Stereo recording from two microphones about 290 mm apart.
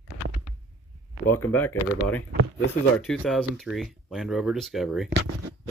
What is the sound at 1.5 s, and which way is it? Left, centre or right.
Speech, centre.